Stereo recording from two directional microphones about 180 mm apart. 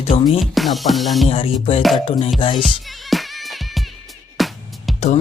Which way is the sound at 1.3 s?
30° left (ahead or behind).